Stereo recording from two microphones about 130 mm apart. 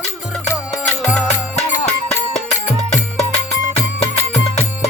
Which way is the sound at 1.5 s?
60° left (ahead or behind).